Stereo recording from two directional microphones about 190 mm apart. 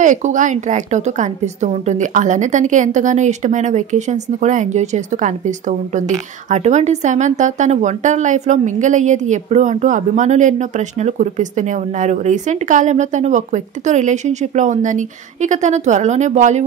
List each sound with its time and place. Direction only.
0.0 s a woman's voice: 40° right (ahead or behind)